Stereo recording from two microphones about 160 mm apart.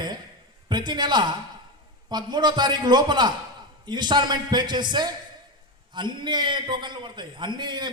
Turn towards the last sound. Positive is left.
turn(degrees=-30)  # may be behind; listen again after turning